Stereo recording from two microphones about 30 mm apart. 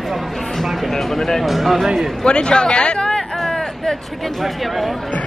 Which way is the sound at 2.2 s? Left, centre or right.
Left.